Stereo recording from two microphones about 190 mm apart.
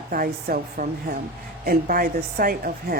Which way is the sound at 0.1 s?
50° right (ahead or behind).